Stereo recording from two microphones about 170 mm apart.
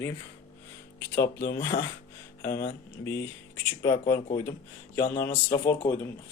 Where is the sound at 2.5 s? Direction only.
55° left (ahead or behind).